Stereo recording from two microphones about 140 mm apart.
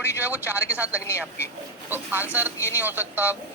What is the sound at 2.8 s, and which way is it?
Speech, 15° right (ahead or behind).